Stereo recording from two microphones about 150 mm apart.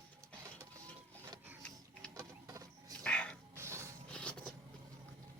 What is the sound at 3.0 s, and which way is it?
Dog, 10° left (ahead or behind).